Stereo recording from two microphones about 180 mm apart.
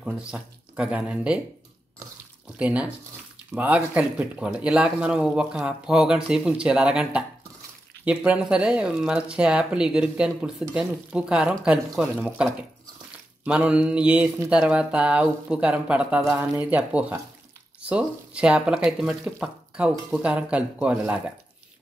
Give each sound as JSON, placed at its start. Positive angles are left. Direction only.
{"t": 0.0, "sound": "speech", "side_deg": -5}
{"t": 2.6, "sound": "speech", "side_deg": -5}